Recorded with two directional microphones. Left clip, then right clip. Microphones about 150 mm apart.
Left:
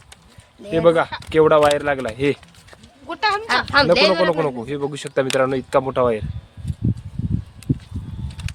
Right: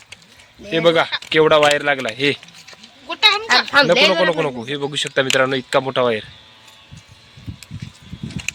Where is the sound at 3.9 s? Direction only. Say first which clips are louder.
Right 1 dB; 25° right (ahead or behind).